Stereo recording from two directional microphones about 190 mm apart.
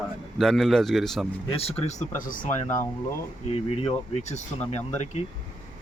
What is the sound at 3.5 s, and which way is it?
Speech, 30° left (ahead or behind).